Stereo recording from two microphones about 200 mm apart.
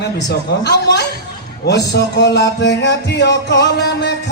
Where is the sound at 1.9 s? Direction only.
60° left (ahead or behind).